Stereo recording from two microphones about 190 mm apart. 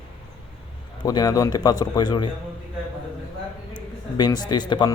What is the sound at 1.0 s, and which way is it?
Speech, 20° left (ahead or behind).